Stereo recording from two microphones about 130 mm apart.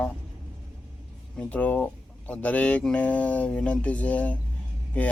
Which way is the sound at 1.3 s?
10° left (ahead or behind).